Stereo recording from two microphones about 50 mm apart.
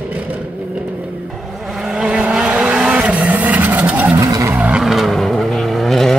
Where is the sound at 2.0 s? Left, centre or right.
Right.